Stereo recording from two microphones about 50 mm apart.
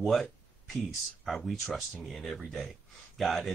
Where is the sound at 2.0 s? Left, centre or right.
Centre.